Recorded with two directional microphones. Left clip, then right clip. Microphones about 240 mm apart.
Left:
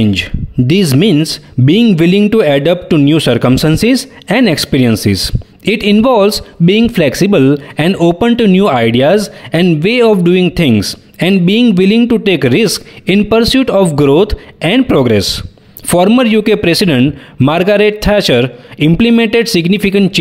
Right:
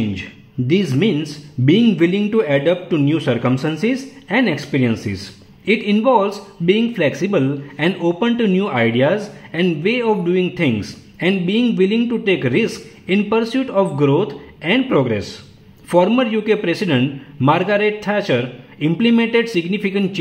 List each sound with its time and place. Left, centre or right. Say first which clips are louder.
0.1 s speech: left 13 dB; left